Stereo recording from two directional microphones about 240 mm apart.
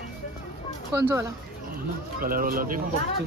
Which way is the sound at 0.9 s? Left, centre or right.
Centre.